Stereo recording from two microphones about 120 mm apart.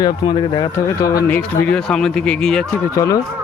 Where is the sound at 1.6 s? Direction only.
5° left (ahead or behind).